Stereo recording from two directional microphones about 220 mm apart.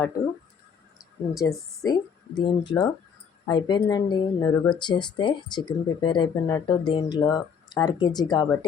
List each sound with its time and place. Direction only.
1.4 s speech: 15° left (ahead or behind)